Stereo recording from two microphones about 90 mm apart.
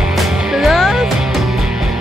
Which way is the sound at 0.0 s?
5° right (ahead or behind).